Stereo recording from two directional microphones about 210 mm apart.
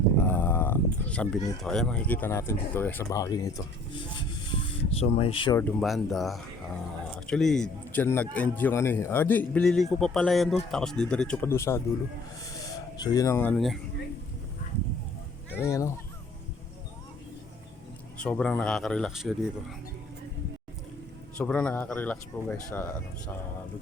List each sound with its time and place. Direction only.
0.2 s a sound: 10° left (ahead or behind)
1.6 s speech: 5° left (ahead or behind); by 5.5 s 25° left (ahead or behind)
5.8 s speech: centre (ahead or behind)
13.0 s speech: 15° left (ahead or behind)
15.5 s speech: 15° left (ahead or behind)
18.2 s speech: 5° left (ahead or behind)
21.3 s speech: 5° left (ahead or behind)